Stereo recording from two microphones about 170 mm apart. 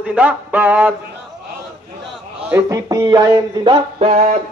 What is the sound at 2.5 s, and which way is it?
Speech, 20° right (ahead or behind).